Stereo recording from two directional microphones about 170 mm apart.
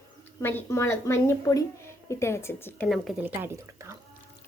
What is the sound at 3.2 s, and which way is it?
Speech, 15° right (ahead or behind).